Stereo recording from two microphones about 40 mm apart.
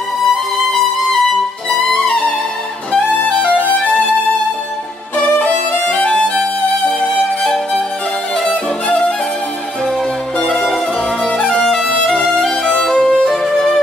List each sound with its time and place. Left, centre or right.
3.6 s music: left
5.9 s music: left
10.5 s music: centre
11.6 s music: centre
12.6 s music: centre